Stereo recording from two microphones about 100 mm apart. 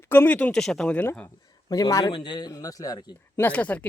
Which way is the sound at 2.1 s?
55° left (ahead or behind).